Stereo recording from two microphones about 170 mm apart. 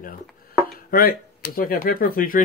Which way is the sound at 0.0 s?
60° left (ahead or behind).